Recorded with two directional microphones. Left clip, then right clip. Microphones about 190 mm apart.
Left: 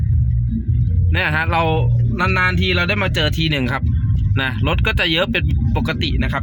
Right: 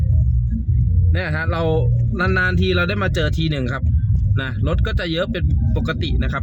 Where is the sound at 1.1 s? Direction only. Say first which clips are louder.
Left 6 dB; 5° left (ahead or behind); by 6.4 s 10° right (ahead or behind).